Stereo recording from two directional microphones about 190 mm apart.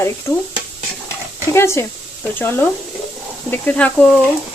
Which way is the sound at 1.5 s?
15° left (ahead or behind).